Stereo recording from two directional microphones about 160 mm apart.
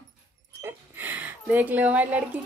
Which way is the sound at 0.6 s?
15° right (ahead or behind).